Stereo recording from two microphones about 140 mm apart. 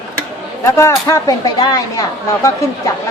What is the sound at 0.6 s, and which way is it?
Speech, 20° left (ahead or behind).